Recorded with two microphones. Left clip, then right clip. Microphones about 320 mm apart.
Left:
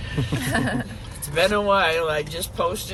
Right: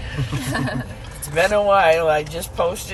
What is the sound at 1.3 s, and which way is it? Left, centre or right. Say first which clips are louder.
Speech: right 4 dB; centre.